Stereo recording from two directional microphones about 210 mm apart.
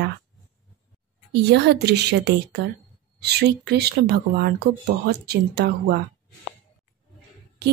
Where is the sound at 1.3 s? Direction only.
55° right (ahead or behind).